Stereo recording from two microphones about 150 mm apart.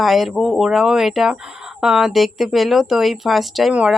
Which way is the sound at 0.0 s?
Centre (ahead or behind).